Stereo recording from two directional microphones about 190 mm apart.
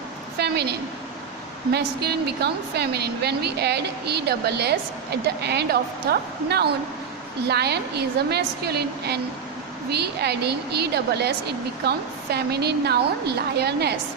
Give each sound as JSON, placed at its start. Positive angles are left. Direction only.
{"t": 0.3, "sound": "a woman's voice", "side_deg": -60}